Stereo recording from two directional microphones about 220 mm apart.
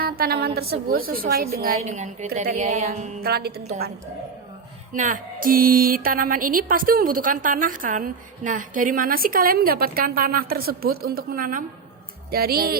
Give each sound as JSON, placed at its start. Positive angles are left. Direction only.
{"t": 0.0, "sound": "a woman's voice", "side_deg": -45}
{"t": 3.2, "sound": "a woman's voice", "side_deg": -45}
{"t": 4.9, "sound": "a woman's voice", "side_deg": -35}